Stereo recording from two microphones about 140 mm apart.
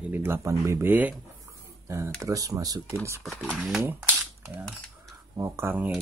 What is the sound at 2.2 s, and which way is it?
Speech, 25° right (ahead or behind).